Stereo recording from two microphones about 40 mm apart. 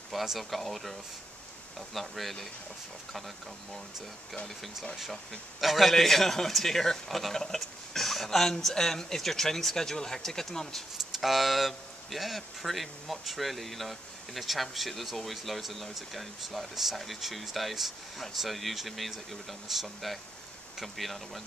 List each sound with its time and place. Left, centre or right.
0.1 s speech: centre
5.6 s speech: centre
11.1 s speech: centre